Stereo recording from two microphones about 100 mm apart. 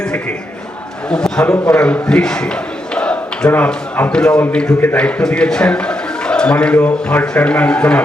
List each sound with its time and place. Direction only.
1.1 s a man's voice: 10° left (ahead or behind)